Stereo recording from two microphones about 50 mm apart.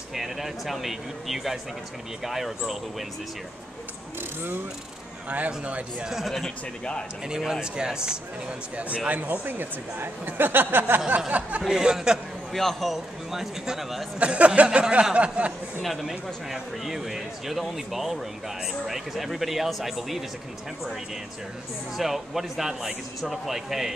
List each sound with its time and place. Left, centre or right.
0.1 s speech: centre
5.5 s speech: right
6.0 s speech: centre
6.8 s speech: centre
7.2 s speech: centre; by 11.0 s right
11.1 s speech: right
11.6 s speech: centre
12.5 s speech: centre
14.2 s speech: right
15.8 s speech: centre
21.9 s speech: centre